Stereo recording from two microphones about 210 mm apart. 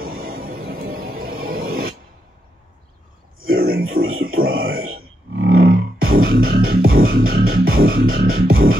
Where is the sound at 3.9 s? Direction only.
45° right (ahead or behind).